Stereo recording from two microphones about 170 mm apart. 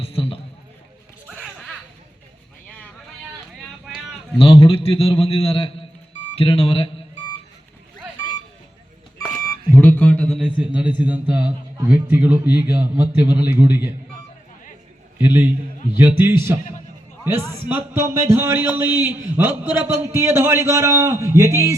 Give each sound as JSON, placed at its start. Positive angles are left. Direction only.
{"t": 0.0, "sound": "a sound", "side_deg": 35}
{"t": 3.6, "sound": "vehicle", "side_deg": 0}
{"t": 4.4, "sound": "a man's voice", "side_deg": 30}
{"t": 9.7, "sound": "a man's voice", "side_deg": 10}
{"t": 15.2, "sound": "a man's voice", "side_deg": -10}